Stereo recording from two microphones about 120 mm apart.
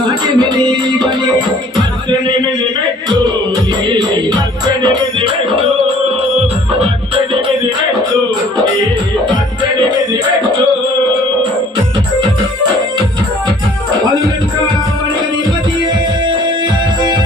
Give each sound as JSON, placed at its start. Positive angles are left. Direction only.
{"t": 0.1, "sound": "music", "side_deg": -35}
{"t": 3.8, "sound": "music", "side_deg": -35}